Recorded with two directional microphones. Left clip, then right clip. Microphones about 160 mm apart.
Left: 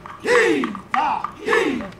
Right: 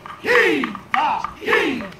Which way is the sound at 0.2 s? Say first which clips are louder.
Right 1 dB; 30° left (ahead or behind).